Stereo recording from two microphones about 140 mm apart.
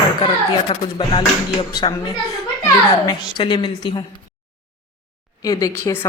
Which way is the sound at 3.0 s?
35° left (ahead or behind).